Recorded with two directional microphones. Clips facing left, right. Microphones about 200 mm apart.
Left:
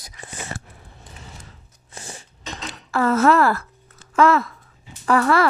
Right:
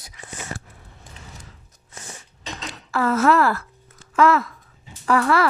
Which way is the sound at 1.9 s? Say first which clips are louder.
Left 3 dB; 30° left (ahead or behind).